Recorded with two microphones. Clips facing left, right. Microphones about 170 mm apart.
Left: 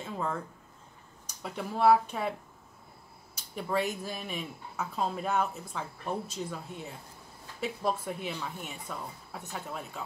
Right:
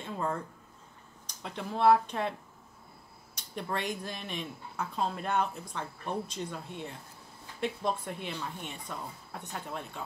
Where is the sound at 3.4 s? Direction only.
5° left (ahead or behind).